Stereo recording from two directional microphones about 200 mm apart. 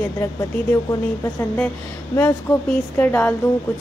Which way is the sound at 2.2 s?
10° left (ahead or behind).